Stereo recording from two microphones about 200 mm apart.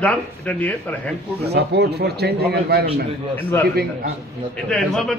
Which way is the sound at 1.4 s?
55° right (ahead or behind).